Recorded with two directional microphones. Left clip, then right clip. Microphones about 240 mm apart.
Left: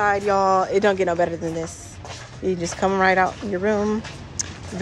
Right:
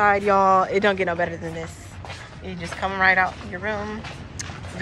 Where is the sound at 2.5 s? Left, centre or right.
Left.